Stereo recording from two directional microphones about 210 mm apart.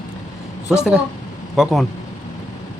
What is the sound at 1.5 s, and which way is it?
Speech, centre (ahead or behind).